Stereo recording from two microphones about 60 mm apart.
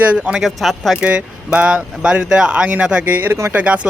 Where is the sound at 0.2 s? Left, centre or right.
Centre.